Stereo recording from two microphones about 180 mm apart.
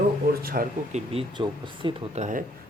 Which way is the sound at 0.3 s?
55° right (ahead or behind).